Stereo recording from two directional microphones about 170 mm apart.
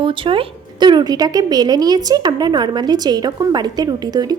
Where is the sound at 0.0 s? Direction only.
30° right (ahead or behind).